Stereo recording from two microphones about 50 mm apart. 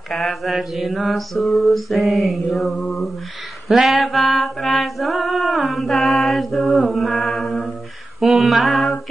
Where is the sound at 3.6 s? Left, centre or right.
Centre.